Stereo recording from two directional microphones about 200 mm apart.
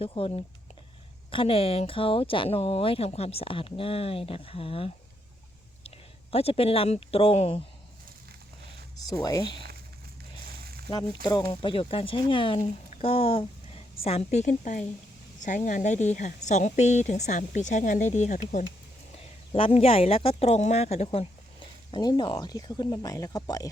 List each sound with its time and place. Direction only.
0.0 s speech: 30° left (ahead or behind)
6.3 s speech: 30° left (ahead or behind)
9.0 s speech: 20° left (ahead or behind)
10.8 s a woman's voice: 20° left (ahead or behind)